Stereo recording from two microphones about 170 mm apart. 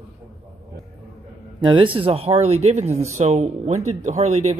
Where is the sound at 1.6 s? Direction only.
30° right (ahead or behind).